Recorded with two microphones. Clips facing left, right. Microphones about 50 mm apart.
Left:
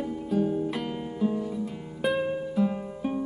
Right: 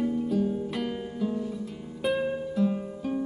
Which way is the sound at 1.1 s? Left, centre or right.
Centre.